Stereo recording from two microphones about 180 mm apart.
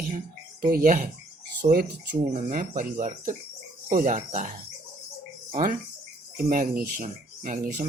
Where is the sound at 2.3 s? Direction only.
50° right (ahead or behind).